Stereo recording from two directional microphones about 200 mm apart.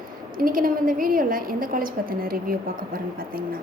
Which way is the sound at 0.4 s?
45° right (ahead or behind).